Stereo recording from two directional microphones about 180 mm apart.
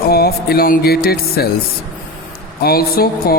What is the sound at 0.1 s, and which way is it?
Speech, 60° left (ahead or behind).